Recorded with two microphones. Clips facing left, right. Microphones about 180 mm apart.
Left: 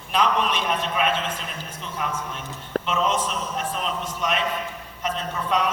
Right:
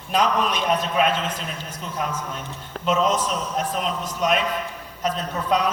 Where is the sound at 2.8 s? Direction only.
40° right (ahead or behind).